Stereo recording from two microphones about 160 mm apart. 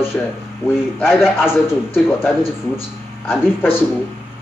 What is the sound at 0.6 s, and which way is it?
Speech, 15° left (ahead or behind).